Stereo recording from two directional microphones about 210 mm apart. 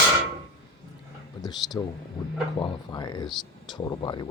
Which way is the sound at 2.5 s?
20° left (ahead or behind).